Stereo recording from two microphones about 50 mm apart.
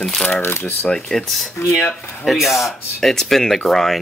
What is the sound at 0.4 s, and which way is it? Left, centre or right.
Speech, left.